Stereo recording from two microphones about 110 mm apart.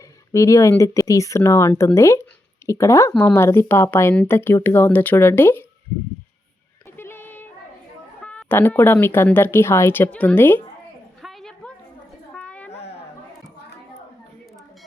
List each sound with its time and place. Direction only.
0.3 s speech: 30° left (ahead or behind)
6.9 s female singing: 20° left (ahead or behind)
8.2 s speech: 10° left (ahead or behind)
11.2 s a sound: centre (ahead or behind)